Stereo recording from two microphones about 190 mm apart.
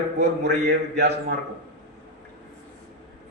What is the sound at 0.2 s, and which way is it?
Speech, 60° right (ahead or behind).